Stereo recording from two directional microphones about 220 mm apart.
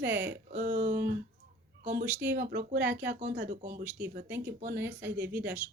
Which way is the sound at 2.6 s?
45° right (ahead or behind).